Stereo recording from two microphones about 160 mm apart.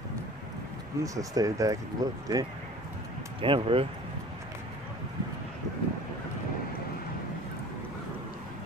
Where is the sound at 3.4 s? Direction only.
35° right (ahead or behind).